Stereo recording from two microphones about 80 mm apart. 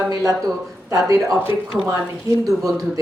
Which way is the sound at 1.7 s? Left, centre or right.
Centre.